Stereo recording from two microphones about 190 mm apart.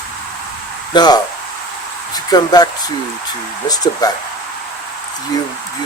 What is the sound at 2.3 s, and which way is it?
Speech, 20° left (ahead or behind).